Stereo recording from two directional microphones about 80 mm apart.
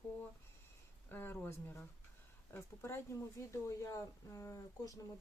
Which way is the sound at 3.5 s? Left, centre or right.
Left.